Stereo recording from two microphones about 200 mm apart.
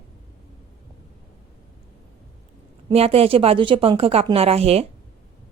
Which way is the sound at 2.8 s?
30° right (ahead or behind).